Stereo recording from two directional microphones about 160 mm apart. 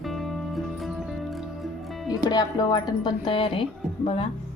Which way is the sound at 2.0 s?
25° left (ahead or behind).